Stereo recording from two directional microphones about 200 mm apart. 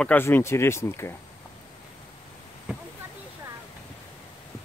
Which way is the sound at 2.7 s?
5° right (ahead or behind).